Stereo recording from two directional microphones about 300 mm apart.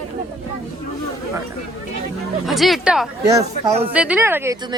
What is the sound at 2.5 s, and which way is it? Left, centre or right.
Speech, centre.